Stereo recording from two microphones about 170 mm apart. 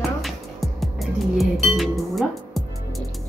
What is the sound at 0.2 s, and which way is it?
Music, centre (ahead or behind).